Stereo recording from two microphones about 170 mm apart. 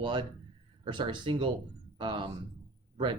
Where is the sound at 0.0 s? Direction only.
30° right (ahead or behind).